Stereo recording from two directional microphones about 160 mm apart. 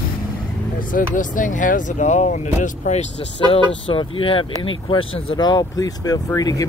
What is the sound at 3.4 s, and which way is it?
Speech, 35° left (ahead or behind).